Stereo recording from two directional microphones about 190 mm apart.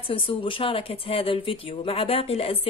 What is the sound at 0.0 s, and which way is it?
Speech, 30° left (ahead or behind).